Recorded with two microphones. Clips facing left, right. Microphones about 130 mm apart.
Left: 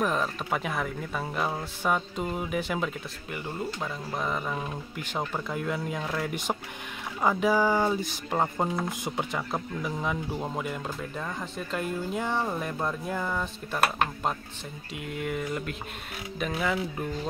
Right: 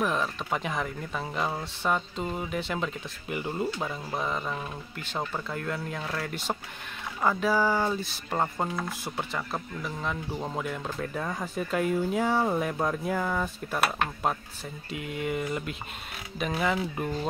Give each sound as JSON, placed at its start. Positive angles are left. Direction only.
{"t": 0.0, "sound": "speech", "side_deg": 0}
{"t": 3.3, "sound": "speech", "side_deg": -10}
{"t": 4.1, "sound": "speech", "side_deg": 0}
{"t": 11.2, "sound": "speech", "side_deg": -10}
{"t": 14.9, "sound": "speech", "side_deg": 0}